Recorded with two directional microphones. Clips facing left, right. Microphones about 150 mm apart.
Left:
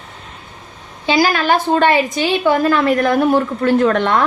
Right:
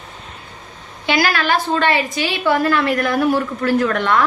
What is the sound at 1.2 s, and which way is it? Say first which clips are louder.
A woman's voice: left 3 dB; 45° left (ahead or behind).